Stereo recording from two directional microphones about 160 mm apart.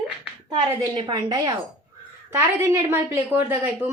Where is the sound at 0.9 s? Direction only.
25° right (ahead or behind).